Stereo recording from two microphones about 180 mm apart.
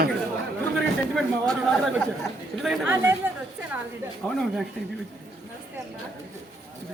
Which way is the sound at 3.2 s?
10° right (ahead or behind).